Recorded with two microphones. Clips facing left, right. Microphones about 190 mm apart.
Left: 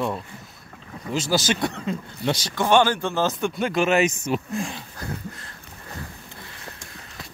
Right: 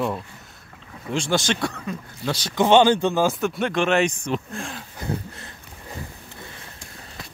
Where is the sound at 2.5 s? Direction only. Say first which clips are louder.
Right 4 dB; 20° right (ahead or behind); by 4.8 s centre (ahead or behind).